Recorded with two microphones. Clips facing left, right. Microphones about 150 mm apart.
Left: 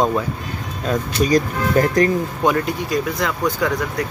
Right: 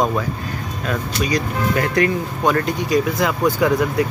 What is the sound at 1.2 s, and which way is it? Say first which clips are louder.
Speech: left 3 dB; 40° left (ahead or behind).